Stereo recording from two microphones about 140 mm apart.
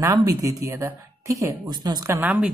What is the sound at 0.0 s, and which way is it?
Speech, 25° right (ahead or behind).